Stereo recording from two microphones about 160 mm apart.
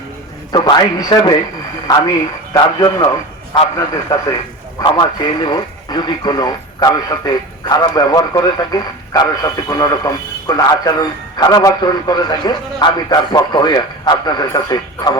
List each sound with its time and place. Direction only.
0.5 s speech: 25° left (ahead or behind)